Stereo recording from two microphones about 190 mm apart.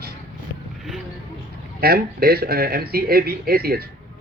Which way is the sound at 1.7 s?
55° right (ahead or behind).